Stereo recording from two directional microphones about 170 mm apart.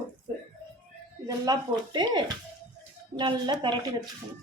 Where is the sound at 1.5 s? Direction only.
25° right (ahead or behind).